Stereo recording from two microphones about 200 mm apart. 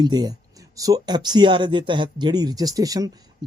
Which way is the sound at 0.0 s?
20° right (ahead or behind).